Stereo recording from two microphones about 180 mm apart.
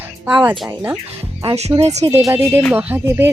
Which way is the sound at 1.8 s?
35° right (ahead or behind).